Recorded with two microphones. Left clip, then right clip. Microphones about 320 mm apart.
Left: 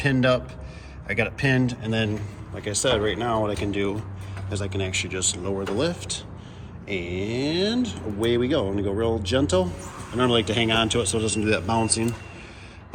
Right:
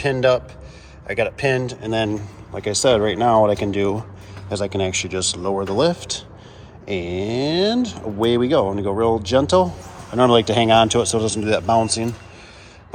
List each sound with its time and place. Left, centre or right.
0.0 s a man's voice: centre